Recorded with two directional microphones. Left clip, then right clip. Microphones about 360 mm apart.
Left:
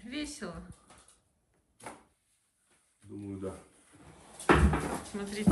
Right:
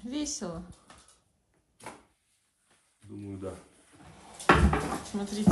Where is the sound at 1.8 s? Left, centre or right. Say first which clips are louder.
Right 1 dB; centre.